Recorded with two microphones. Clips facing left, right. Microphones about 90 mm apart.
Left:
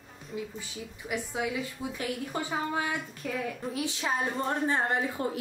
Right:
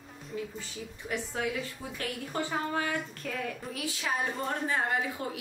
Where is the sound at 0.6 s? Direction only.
10° left (ahead or behind).